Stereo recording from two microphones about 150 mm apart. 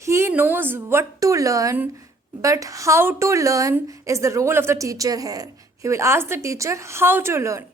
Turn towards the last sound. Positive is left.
turn(degrees=-20)  # may be behind; listen again after turning